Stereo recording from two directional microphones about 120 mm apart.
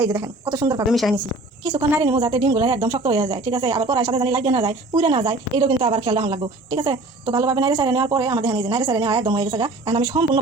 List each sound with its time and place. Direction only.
0.0 s speech: 25° right (ahead or behind)
0.9 s speech: centre (ahead or behind)
2.0 s a woman's voice: 40° right (ahead or behind)